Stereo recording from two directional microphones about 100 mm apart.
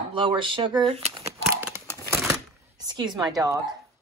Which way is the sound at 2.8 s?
45° right (ahead or behind).